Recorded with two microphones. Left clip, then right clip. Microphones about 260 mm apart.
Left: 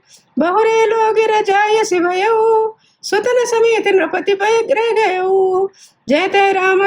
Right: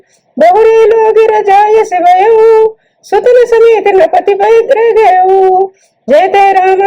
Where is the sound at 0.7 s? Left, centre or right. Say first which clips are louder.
Right 8 dB; left.